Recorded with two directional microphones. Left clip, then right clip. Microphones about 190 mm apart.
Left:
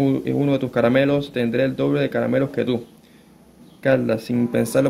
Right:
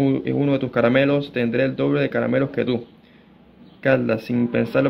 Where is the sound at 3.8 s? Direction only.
10° left (ahead or behind).